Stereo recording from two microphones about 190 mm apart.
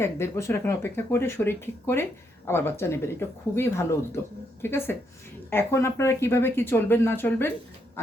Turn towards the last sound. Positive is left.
turn(degrees=10)  # may be behind; listen again after turning